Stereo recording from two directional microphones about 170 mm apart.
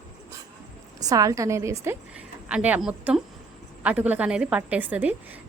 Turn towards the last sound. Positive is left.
turn(degrees=-10)  # may be behind; listen again after turning